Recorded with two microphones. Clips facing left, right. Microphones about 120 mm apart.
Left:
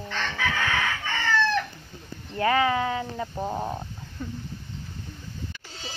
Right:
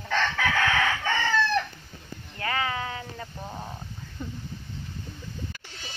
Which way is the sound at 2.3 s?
25° left (ahead or behind).